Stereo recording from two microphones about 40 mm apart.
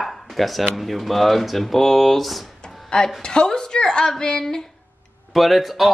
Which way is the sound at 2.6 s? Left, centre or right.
Centre.